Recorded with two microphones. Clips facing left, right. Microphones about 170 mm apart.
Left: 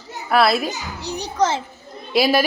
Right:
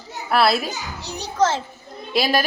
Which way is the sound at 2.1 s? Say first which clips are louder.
Left 3 dB; centre (ahead or behind).